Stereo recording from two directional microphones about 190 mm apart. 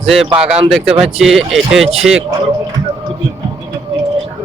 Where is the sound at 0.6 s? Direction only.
5° right (ahead or behind).